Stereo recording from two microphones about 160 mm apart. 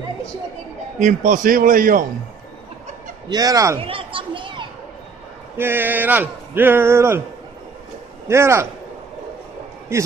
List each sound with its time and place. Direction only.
0.9 s a man's voice: 55° right (ahead or behind)
3.3 s speech: 25° right (ahead or behind)
3.8 s children playing: 35° right (ahead or behind)
5.6 s speech: 10° right (ahead or behind)
8.3 s speech: 15° right (ahead or behind)
9.9 s speech: 15° right (ahead or behind)